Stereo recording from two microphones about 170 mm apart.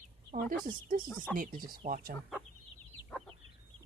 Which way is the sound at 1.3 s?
55° right (ahead or behind).